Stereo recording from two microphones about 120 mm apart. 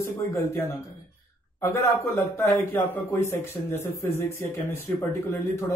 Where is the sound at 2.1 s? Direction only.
20° left (ahead or behind).